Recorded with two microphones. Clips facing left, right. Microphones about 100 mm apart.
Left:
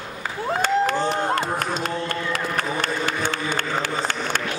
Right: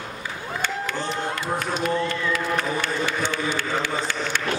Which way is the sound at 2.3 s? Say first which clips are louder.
Right 1 dB; 45° left (ahead or behind).